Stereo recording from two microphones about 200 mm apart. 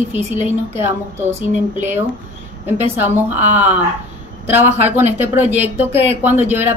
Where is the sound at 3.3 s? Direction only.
35° right (ahead or behind).